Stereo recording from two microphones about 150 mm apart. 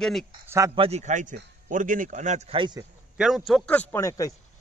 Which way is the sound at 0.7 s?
45° right (ahead or behind).